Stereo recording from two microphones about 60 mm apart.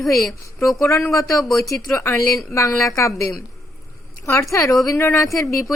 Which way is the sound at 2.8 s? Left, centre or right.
Left.